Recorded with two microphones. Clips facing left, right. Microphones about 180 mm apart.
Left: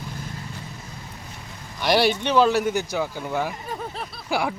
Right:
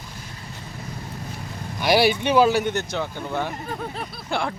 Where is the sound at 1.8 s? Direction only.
5° right (ahead or behind).